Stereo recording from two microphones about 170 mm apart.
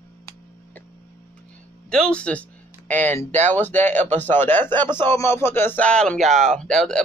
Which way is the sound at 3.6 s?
10° left (ahead or behind).